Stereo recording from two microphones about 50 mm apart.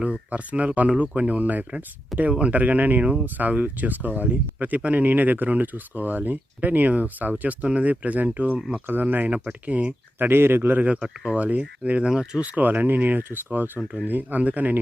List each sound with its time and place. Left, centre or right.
0.3 s speech: right
2.1 s speech: centre
2.5 s speech: right
10.2 s a man's voice: right
11.0 s speech: centre
11.3 s speech: right
12.5 s speech: right
13.7 s speech: right
14.1 s speech: right